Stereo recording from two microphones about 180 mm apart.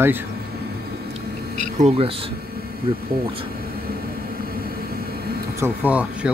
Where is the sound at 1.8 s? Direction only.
30° right (ahead or behind).